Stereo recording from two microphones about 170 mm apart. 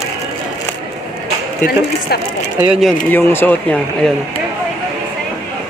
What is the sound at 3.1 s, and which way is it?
A man's voice, 10° left (ahead or behind).